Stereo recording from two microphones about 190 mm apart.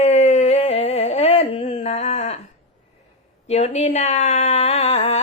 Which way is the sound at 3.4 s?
35° left (ahead or behind).